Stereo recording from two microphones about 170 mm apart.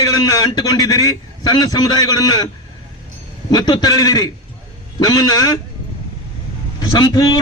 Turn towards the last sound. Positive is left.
turn(degrees=25)  # may be behind; listen again after turning